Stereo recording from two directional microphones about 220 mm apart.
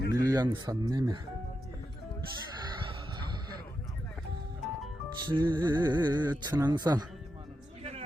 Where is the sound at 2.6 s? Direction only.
20° right (ahead or behind).